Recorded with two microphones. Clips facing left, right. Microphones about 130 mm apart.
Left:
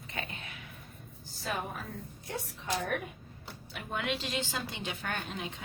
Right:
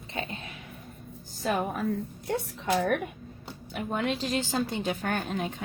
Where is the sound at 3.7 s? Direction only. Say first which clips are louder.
Right 6 dB; 40° right (ahead or behind).